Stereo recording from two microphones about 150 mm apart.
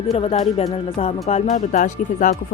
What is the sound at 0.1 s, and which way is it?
Speech, 45° left (ahead or behind).